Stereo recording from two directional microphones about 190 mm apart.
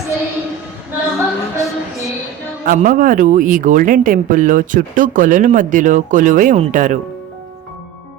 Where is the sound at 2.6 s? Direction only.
45° right (ahead or behind).